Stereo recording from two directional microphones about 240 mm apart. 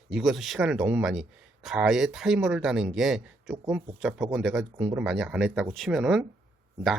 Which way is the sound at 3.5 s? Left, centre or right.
Centre.